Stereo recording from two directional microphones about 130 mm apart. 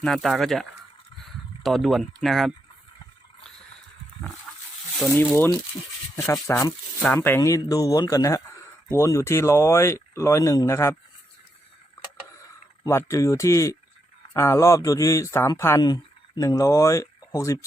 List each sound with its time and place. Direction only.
0.0 s speech: centre (ahead or behind)
5.1 s speech: 15° left (ahead or behind)
12.8 s speech: 25° left (ahead or behind)